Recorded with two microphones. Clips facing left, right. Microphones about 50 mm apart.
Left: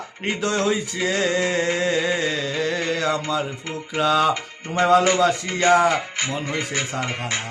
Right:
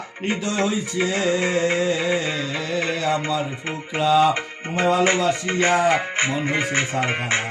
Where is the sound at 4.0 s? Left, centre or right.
Left.